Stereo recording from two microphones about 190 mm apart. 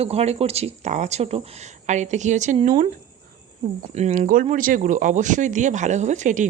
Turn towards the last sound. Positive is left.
turn(degrees=-40)  # may be behind; listen again after turning